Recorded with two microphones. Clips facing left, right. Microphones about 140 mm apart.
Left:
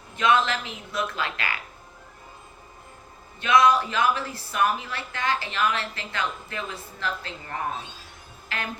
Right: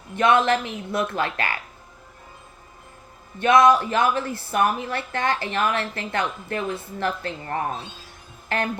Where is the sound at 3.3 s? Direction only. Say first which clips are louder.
Right 4 dB; 55° right (ahead or behind).